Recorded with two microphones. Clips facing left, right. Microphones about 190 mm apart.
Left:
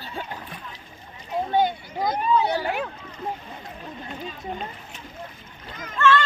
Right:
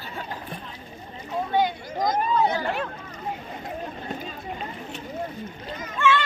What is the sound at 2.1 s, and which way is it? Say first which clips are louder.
Speech: left 2 dB; 70° left (ahead or behind).